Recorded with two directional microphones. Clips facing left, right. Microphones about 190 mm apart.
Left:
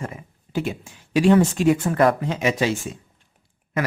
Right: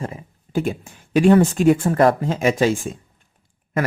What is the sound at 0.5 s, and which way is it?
Speech, 50° right (ahead or behind).